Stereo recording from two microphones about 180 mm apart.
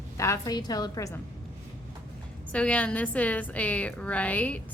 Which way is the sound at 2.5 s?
5° left (ahead or behind).